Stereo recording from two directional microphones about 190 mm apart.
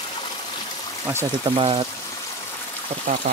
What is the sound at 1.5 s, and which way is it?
Speech, 30° right (ahead or behind).